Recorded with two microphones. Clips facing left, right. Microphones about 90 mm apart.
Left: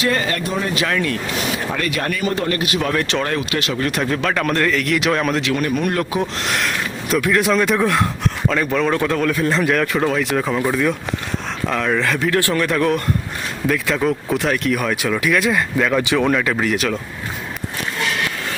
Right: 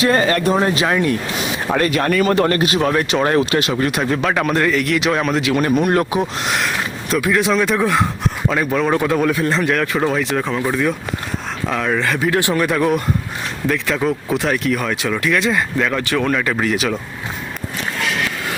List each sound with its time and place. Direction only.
0.0 s speech: 35° right (ahead or behind)
0.3 s speech: 45° right (ahead or behind)
0.7 s speech: 25° right (ahead or behind)
1.7 s speech: 40° right (ahead or behind)
2.1 s speech: 60° right (ahead or behind)
2.5 s speech: 35° right (ahead or behind)
3.0 s speech: 15° right (ahead or behind)
3.2 s speech: 30° right (ahead or behind)
3.8 s speech: 5° right (ahead or behind)
5.5 s speech: 25° right (ahead or behind)
6.4 s speech: 5° right (ahead or behind)
9.4 s speech: centre (ahead or behind)
12.3 s speech: 15° right (ahead or behind)